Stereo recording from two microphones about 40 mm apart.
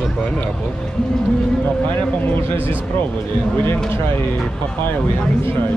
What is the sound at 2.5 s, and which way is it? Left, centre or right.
Speech, left.